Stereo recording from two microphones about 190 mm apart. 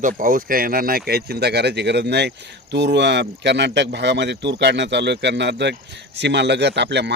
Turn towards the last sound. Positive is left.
turn(degrees=-65)  # may be behind; listen again after turning